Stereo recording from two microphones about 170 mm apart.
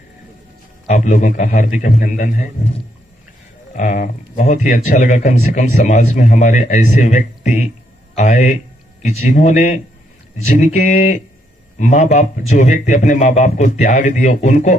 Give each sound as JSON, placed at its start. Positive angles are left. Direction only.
{"t": 0.8, "sound": "speech", "side_deg": 45}